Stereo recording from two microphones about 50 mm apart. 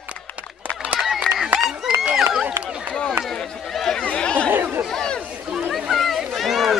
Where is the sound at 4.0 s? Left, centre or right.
Left.